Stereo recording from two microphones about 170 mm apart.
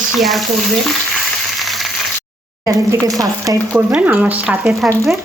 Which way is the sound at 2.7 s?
20° right (ahead or behind).